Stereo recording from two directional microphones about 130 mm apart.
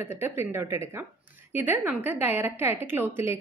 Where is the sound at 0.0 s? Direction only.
20° right (ahead or behind).